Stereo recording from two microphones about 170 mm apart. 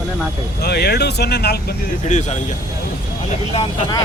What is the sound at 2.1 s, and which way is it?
Speech, 45° left (ahead or behind).